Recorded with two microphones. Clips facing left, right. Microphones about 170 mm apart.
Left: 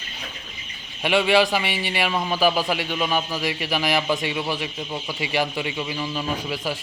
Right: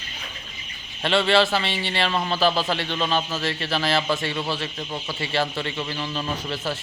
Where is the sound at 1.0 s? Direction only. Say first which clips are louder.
Left 1 dB; 10° left (ahead or behind).